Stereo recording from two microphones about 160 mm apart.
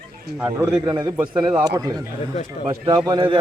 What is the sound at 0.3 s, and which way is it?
Speech, 15° right (ahead or behind).